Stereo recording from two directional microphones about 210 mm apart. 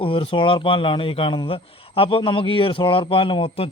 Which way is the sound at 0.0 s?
25° left (ahead or behind).